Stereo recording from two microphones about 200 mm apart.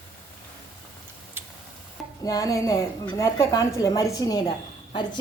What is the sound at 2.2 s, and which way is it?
A woman's voice, 15° left (ahead or behind).